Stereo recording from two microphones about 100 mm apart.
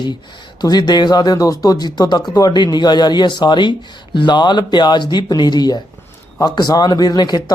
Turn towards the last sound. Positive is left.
turn(degrees=40)  # may be behind; listen again after turning